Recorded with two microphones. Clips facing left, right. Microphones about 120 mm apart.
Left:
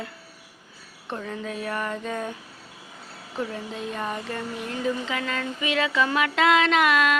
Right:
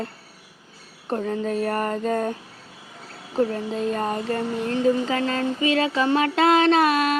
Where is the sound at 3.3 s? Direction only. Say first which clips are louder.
Right 8 dB; 40° right (ahead or behind).